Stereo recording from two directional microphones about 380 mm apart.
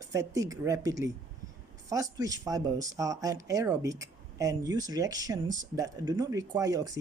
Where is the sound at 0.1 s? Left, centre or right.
Centre.